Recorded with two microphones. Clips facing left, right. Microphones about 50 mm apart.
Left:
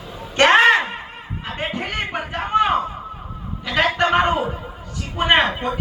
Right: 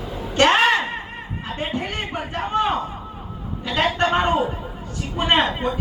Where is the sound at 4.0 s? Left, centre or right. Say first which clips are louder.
Left 3 dB; left.